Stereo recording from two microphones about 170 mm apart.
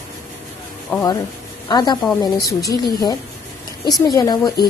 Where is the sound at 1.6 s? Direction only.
25° left (ahead or behind).